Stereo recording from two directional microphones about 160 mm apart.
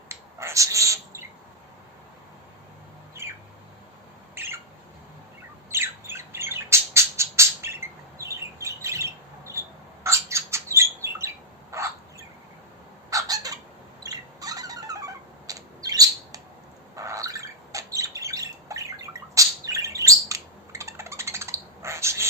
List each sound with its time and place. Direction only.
0.1 s a sound: 15° right (ahead or behind)
3.2 s squawk: 15° right (ahead or behind)
5.7 s squawk: 15° right (ahead or behind)
11.7 s bird: 20° right (ahead or behind)
13.1 s bird: 20° right (ahead or behind)